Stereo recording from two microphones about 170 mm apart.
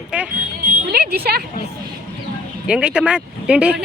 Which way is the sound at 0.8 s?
65° right (ahead or behind).